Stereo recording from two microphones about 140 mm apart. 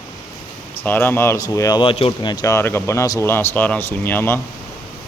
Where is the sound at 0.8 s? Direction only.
15° left (ahead or behind).